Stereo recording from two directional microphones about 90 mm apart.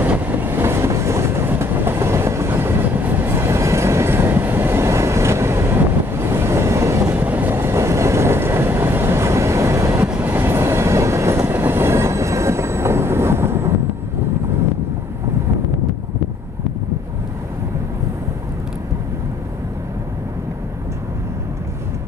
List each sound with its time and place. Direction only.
0.0 s train: 20° right (ahead or behind)
10.0 s train: 20° right (ahead or behind)